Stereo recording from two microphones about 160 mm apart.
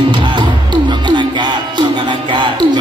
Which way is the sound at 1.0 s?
30° right (ahead or behind).